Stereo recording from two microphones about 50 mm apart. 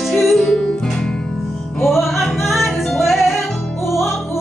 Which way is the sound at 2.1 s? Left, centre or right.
Centre.